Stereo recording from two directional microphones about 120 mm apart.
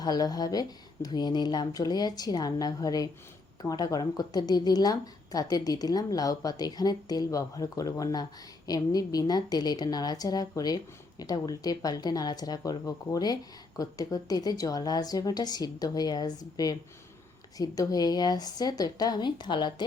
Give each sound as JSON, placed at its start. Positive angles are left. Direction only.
{"t": 0.0, "sound": "a woman's voice", "side_deg": 30}